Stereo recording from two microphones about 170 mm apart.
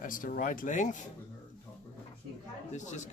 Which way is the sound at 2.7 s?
45° left (ahead or behind).